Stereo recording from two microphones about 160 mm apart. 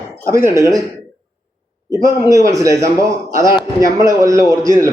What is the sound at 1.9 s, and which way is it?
A man's voice, 20° right (ahead or behind).